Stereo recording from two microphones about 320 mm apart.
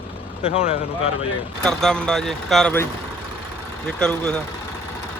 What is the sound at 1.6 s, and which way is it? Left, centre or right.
Speech, centre.